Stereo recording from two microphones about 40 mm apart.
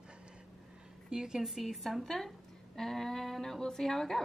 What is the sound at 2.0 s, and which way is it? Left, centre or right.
A woman's voice, centre.